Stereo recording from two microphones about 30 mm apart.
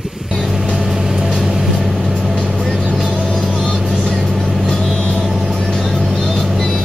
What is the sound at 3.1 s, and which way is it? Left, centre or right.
Music, centre.